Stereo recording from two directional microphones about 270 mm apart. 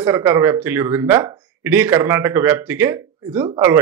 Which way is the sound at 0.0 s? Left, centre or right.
Centre.